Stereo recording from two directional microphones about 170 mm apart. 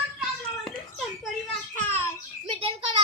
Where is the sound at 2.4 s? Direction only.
35° right (ahead or behind).